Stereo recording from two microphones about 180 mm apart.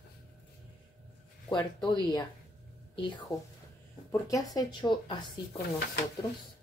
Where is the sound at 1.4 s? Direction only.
25° left (ahead or behind).